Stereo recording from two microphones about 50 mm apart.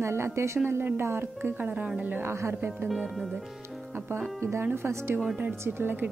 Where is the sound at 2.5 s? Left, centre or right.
Right.